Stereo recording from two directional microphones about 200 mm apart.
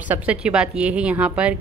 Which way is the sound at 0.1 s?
5° right (ahead or behind).